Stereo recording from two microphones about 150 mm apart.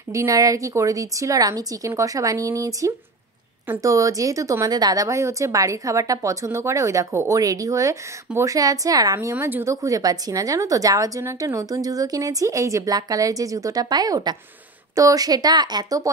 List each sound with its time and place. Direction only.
0.1 s a woman's voice: 20° right (ahead or behind)